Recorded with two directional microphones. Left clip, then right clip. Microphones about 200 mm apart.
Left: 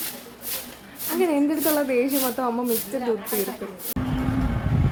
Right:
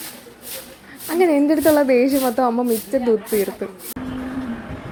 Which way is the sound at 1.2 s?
30° right (ahead or behind).